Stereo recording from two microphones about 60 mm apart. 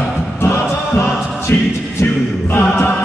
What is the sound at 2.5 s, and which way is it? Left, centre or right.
Music, left.